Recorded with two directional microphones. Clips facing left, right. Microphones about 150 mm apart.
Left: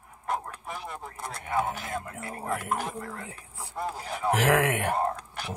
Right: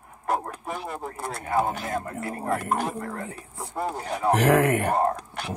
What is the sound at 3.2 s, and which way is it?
Speech, 30° right (ahead or behind).